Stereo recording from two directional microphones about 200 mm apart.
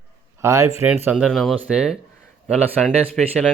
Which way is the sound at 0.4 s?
15° right (ahead or behind).